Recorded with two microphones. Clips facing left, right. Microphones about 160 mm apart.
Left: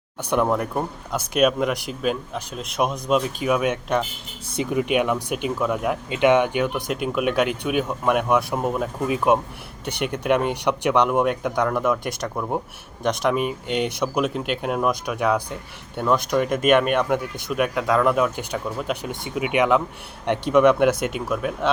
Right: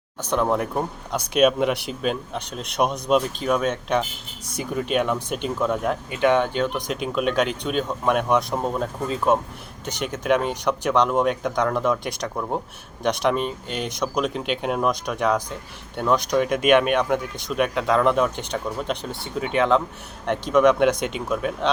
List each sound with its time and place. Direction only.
0.2 s speech: 10° left (ahead or behind)
0.4 s speech: centre (ahead or behind)
4.4 s speech: 20° left (ahead or behind); by 6.0 s 5° left (ahead or behind)
6.1 s speech: 20° left (ahead or behind)
9.8 s speech: 60° left (ahead or behind)
10.2 s speech: 10° left (ahead or behind)